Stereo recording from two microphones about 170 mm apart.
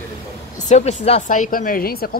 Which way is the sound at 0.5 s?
45° left (ahead or behind).